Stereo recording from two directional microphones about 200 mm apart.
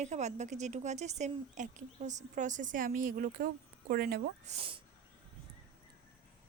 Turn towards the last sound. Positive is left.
turn(degrees=-25)  # may be behind; listen again after turning